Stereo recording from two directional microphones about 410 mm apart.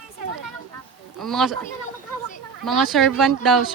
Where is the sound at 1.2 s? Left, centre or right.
Centre.